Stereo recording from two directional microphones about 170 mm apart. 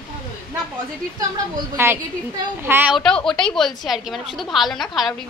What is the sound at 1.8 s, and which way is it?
A woman's voice, 15° right (ahead or behind).